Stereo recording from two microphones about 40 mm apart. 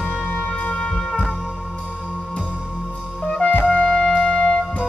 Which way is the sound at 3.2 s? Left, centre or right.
Left.